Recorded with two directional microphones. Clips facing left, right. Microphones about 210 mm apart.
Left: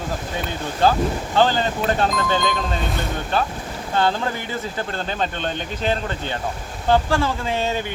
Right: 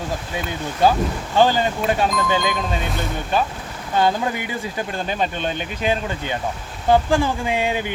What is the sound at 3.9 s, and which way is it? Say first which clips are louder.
Speech: right 2 dB; 15° right (ahead or behind).